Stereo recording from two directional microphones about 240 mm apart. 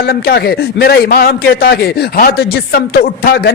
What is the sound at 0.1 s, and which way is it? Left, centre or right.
Speech, left.